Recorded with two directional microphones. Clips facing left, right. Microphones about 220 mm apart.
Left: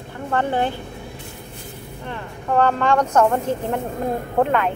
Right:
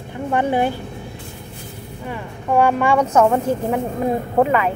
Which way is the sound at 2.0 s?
10° right (ahead or behind).